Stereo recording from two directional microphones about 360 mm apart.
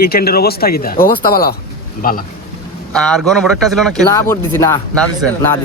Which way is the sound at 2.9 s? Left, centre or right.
Centre.